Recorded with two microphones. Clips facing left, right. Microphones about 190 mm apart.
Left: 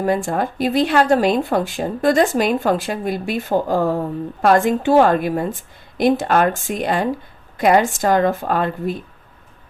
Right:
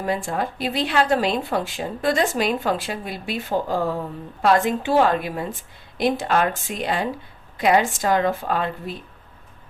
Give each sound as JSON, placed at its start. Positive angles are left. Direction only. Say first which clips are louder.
{"t": 0.0, "sound": "speech", "louder": "left 5 dB", "side_deg": 45}